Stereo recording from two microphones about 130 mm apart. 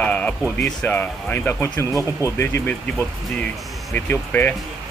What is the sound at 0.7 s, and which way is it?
Speech, 15° left (ahead or behind).